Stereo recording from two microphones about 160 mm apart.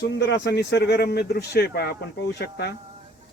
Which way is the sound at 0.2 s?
90° left.